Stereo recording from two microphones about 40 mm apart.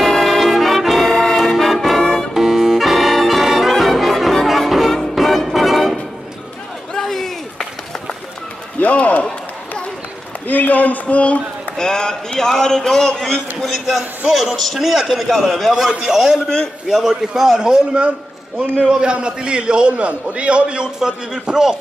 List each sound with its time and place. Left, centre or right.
0.0 s brass instrument: centre
1.3 s music: centre
1.6 s brass instrument: centre
2.0 s music: centre
2.3 s brass instrument: centre
4.6 s music: centre
6.9 s a sound: centre
8.7 s a sound: left
10.5 s a sound: left
11.8 s a sound: centre
13.6 s a man's voice: centre
15.9 s a man's voice: centre